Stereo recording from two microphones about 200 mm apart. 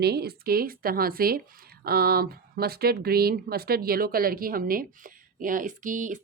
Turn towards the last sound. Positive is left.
turn(degrees=-40)  # may be behind; listen again after turning